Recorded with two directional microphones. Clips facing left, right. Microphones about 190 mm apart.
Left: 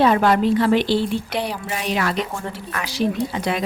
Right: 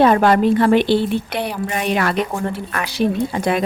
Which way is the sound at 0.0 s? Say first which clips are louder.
Right 3 dB; 50° right (ahead or behind).